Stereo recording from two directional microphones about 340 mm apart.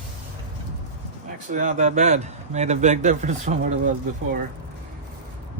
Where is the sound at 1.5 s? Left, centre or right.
Right.